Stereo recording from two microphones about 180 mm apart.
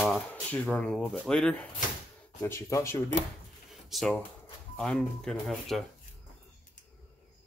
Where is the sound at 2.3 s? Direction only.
15° left (ahead or behind).